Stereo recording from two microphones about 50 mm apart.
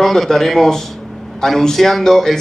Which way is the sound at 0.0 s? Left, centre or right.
Centre.